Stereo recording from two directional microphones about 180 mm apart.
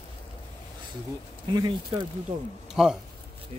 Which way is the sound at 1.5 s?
25° right (ahead or behind).